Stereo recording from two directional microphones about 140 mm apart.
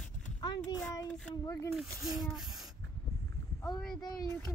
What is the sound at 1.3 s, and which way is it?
Speech, 20° left (ahead or behind).